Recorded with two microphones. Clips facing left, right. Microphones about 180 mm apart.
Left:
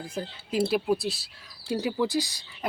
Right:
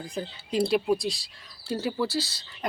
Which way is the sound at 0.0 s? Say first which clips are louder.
Even; 5° left (ahead or behind).